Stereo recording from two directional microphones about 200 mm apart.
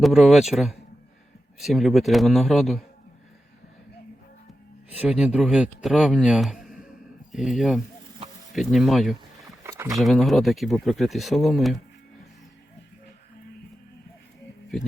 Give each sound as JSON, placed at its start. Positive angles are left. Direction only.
{"t": 0.0, "sound": "a man's voice", "side_deg": 0}
{"t": 4.9, "sound": "a man's voice", "side_deg": -5}
{"t": 9.6, "sound": "a sound", "side_deg": -15}
{"t": 10.0, "sound": "a man's voice", "side_deg": 0}
{"t": 14.7, "sound": "a man's voice", "side_deg": 0}